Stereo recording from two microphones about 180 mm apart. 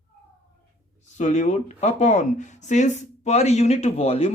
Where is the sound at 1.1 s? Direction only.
40° left (ahead or behind).